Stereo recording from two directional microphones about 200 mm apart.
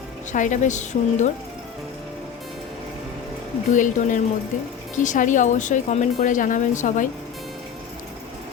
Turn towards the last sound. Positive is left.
turn(degrees=40)  # may be behind; listen again after turning